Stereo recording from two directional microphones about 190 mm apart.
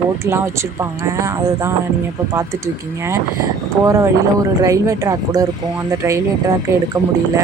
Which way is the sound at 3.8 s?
15° right (ahead or behind).